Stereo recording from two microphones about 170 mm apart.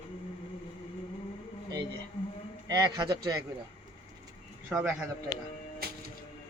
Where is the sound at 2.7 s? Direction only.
25° right (ahead or behind).